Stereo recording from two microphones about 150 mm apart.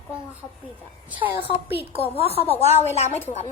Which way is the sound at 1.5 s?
40° left (ahead or behind).